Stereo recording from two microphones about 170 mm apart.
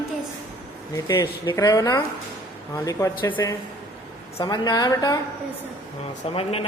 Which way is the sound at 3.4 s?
20° left (ahead or behind).